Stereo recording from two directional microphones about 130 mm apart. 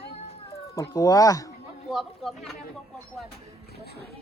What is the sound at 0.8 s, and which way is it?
Speech, 30° left (ahead or behind).